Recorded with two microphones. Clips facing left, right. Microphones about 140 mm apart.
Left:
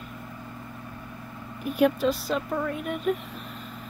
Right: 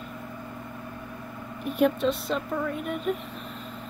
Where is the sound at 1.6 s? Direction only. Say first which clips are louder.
Left 1 dB; centre (ahead or behind).